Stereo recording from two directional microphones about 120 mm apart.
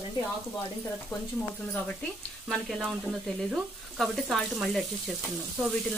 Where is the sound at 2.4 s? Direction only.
5° right (ahead or behind).